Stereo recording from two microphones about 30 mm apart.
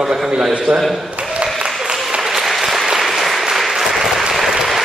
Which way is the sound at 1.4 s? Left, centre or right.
Right.